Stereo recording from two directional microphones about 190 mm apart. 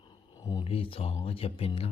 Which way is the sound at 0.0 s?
25° left (ahead or behind).